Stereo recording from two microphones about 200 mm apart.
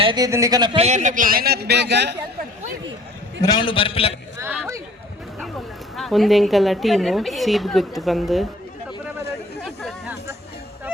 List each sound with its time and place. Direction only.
0.0 s speech: 20° right (ahead or behind)
0.9 s a man's voice: 35° right (ahead or behind); by 2.1 s 55° right (ahead or behind)
3.4 s a man's voice: 20° left (ahead or behind)
4.4 s a sound: 10° right (ahead or behind)
6.0 s a woman's voice: centre (ahead or behind)